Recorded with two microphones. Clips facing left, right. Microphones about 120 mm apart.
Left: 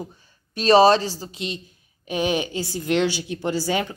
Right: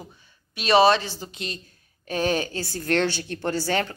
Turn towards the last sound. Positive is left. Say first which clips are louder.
# left 1 dB
turn(degrees=10)  # may be behind; listen again after turning